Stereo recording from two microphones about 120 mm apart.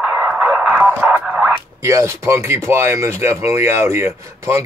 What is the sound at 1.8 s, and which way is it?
Speech, 25° right (ahead or behind).